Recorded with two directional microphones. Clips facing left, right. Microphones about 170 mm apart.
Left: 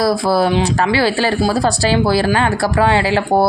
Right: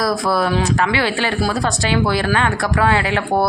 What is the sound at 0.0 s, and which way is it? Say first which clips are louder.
Speech: left 4 dB; 30° left (ahead or behind).